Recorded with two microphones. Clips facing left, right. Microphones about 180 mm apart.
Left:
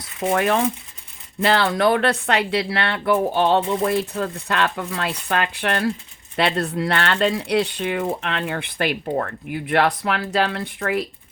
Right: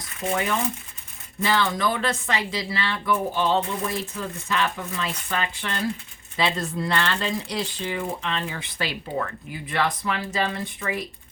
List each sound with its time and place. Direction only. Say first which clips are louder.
0.3 s speech: left 6 dB; 70° left (ahead or behind); by 9.6 s 55° left (ahead or behind)
9.6 s speech: left 6 dB; 65° left (ahead or behind)